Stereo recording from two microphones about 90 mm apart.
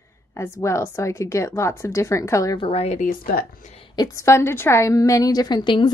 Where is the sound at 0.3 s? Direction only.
30° left (ahead or behind).